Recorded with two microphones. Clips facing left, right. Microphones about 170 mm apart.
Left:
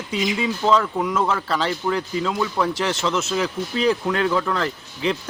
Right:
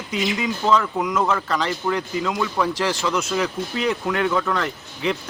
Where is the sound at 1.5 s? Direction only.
30° left (ahead or behind).